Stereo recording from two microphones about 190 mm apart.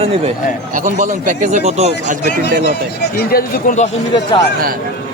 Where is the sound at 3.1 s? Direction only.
50° left (ahead or behind).